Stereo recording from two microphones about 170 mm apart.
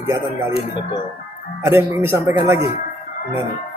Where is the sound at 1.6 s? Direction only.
15° right (ahead or behind).